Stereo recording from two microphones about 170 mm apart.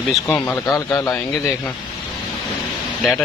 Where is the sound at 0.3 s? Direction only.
15° left (ahead or behind).